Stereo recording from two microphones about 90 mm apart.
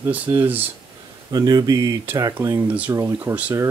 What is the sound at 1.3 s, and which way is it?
Speech, 45° right (ahead or behind).